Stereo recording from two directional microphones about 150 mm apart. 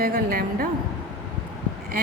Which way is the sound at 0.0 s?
80° right.